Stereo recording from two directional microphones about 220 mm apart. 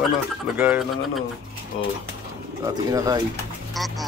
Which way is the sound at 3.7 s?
Centre (ahead or behind).